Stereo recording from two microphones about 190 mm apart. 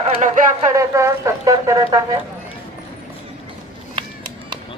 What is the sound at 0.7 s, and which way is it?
Speech, 15° right (ahead or behind).